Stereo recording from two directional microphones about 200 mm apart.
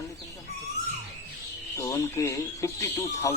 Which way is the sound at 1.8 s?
15° left (ahead or behind).